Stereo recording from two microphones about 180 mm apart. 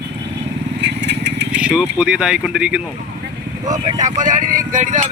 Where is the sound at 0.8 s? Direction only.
70° right (ahead or behind).